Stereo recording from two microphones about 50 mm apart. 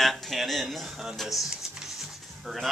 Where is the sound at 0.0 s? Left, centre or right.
Centre.